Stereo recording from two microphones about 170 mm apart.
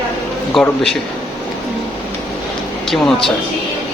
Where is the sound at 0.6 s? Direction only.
Centre (ahead or behind).